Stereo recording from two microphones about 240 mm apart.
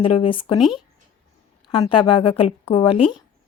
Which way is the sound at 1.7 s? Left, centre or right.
Left.